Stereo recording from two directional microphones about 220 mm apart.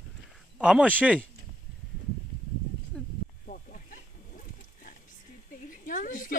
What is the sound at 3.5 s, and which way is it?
Wild animals, 40° left (ahead or behind).